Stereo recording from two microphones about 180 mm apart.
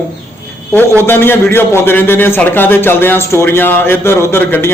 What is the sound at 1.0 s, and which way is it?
A man's voice, 10° left (ahead or behind).